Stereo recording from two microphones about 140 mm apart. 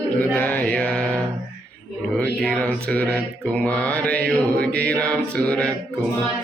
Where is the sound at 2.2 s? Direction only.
10° left (ahead or behind).